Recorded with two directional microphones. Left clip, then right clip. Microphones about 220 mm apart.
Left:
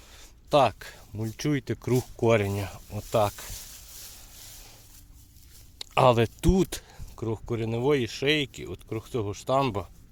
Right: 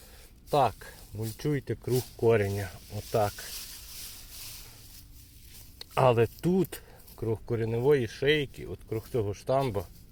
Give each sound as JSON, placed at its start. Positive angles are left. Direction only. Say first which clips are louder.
{"t": 0.5, "sound": "speech", "louder": "left 4 dB", "side_deg": 25}
{"t": 5.9, "sound": "speech", "louder": "left 3 dB", "side_deg": 25}
{"t": 7.2, "sound": "speech", "louder": "even", "side_deg": 20}